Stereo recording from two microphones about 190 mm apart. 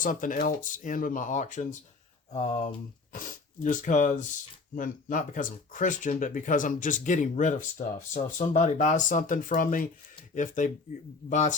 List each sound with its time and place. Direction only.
0.0 s speech: 45° left (ahead or behind)